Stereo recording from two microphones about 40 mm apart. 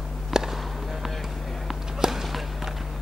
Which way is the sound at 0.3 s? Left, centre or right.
Centre.